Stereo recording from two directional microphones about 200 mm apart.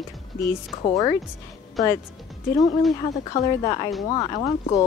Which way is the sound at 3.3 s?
30° left (ahead or behind).